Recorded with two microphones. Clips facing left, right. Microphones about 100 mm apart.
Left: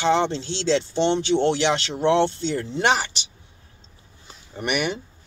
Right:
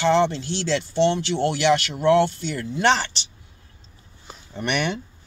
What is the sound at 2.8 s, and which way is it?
Speech, 15° left (ahead or behind).